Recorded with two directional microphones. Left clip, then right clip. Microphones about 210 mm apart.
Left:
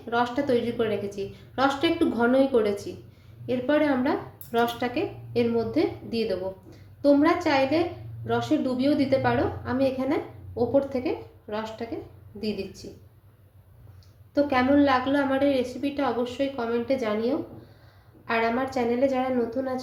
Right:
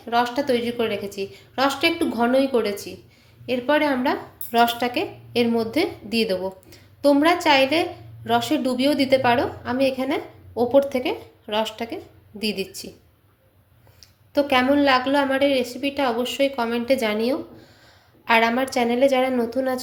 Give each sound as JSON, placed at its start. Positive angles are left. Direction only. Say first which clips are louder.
{"t": 0.0, "sound": "a woman's voice", "louder": "right 4 dB", "side_deg": -25}
{"t": 14.0, "sound": "speech", "louder": "right 3 dB", "side_deg": -35}